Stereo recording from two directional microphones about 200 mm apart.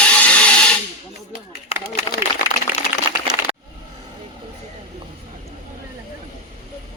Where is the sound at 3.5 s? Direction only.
25° right (ahead or behind).